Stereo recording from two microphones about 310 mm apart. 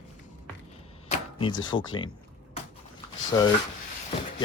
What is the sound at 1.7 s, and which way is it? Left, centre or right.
Speech, centre.